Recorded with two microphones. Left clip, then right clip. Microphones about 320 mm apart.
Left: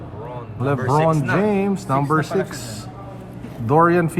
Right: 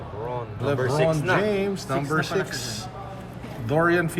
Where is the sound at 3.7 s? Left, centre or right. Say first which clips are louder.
Left 6 dB; centre.